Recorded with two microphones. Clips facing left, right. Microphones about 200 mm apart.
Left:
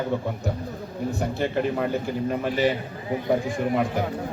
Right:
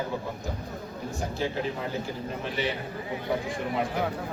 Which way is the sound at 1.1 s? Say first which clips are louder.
Left 4 dB; 60° left (ahead or behind).